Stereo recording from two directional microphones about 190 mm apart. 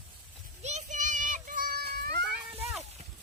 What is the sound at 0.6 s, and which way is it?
Children playing, 40° right (ahead or behind).